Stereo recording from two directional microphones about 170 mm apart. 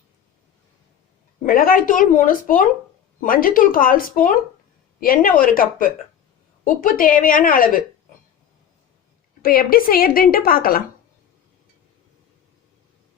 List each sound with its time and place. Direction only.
1.5 s a woman's voice: 55° left (ahead or behind)
9.4 s a woman's voice: 60° left (ahead or behind)